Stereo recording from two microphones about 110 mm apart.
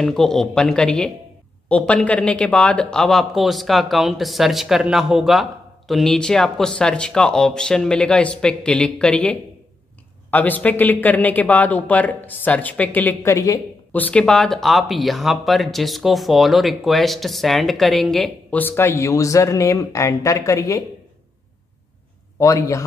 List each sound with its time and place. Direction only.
0.0 s speech: 5° left (ahead or behind); by 13.6 s 30° left (ahead or behind)
13.9 s speech: 15° left (ahead or behind)
14.2 s speech: 5° left (ahead or behind)
18.5 s speech: 20° left (ahead or behind)
22.4 s speech: 30° left (ahead or behind)